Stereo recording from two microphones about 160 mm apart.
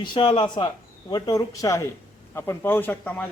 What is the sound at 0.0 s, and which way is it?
Speech, 30° left (ahead or behind).